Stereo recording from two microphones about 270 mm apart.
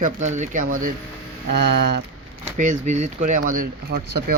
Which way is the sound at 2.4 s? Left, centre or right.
Right.